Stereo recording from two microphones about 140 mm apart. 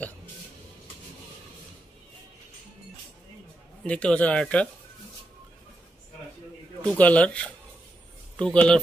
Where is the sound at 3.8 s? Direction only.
10° left (ahead or behind).